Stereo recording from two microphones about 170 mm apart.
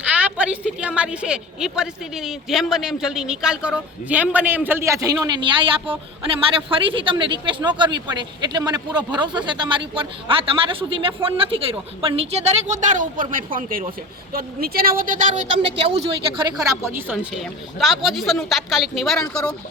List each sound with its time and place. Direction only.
0.2 s a woman's voice: 10° right (ahead or behind); by 15.4 s 55° right (ahead or behind)
15.5 s speech: 90° right
16.6 s a woman's voice: 15° right (ahead or behind)
17.3 s a woman's voice: centre (ahead or behind)